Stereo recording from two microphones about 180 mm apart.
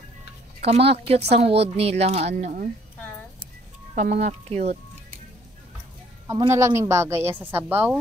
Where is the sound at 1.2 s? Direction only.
35° right (ahead or behind).